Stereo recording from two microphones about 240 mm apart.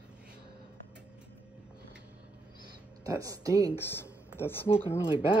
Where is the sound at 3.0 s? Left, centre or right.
Centre.